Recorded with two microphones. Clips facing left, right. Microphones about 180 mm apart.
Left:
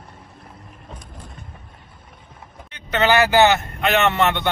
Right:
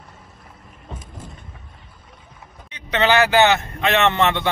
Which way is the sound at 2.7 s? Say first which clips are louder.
Even; centre (ahead or behind).